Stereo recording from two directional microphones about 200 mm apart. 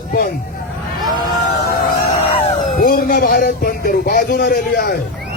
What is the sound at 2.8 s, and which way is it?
A man's voice, 45° left (ahead or behind).